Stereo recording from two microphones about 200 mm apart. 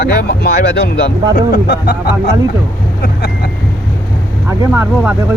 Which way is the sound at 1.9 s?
45° left (ahead or behind).